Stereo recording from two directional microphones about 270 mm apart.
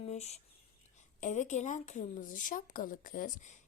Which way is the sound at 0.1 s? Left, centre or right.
Left.